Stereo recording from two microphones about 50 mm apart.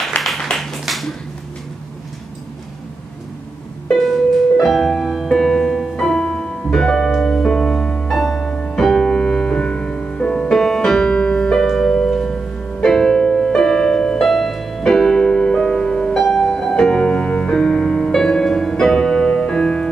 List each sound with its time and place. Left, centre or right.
0.2 s a sound: left
0.6 s a sound: centre
4.0 s music: centre
5.9 s music: centre
8.1 s music: centre
14.2 s music: centre